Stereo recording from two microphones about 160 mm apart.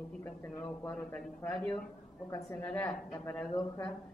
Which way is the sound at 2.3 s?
20° left (ahead or behind).